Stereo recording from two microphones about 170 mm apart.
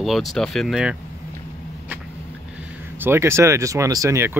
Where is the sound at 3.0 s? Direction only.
15° right (ahead or behind).